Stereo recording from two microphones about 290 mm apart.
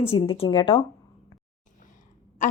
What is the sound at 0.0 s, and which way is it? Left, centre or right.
Speech, centre.